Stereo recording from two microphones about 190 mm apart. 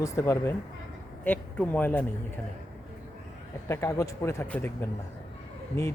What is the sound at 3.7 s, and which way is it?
Speech, 15° left (ahead or behind).